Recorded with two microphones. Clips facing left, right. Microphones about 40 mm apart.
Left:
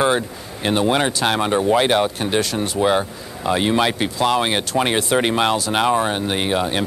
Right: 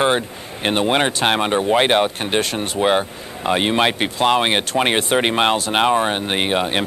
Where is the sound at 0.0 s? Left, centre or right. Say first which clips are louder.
Even; right.